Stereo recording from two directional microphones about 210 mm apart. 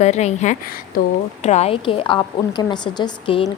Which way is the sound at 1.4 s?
30° left (ahead or behind).